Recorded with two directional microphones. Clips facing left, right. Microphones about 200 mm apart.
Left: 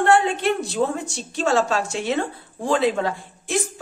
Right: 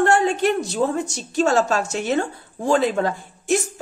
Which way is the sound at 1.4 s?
45° right (ahead or behind).